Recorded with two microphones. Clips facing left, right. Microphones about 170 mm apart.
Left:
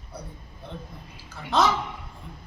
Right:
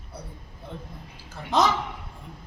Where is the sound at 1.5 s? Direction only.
15° right (ahead or behind).